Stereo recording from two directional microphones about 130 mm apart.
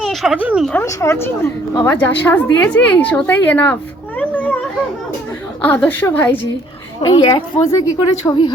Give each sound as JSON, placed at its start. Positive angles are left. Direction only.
{"t": 0.0, "sound": "a sound", "side_deg": 0}
{"t": 0.4, "sound": "speech", "side_deg": -5}
{"t": 0.7, "sound": "a woman's voice", "side_deg": 20}
{"t": 4.2, "sound": "a sound", "side_deg": 15}
{"t": 5.6, "sound": "a woman's voice", "side_deg": 15}
{"t": 7.0, "sound": "a woman's voice", "side_deg": 35}